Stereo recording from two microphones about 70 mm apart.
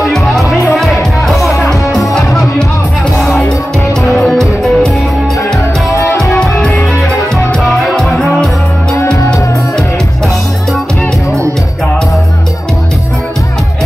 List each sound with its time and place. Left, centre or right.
0.0 s music: centre
4.3 s music: centre
5.9 s music: left
7.6 s music: centre
7.9 s music: centre